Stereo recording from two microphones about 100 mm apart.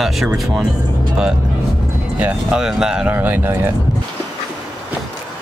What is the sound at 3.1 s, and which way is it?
Speech, 20° right (ahead or behind).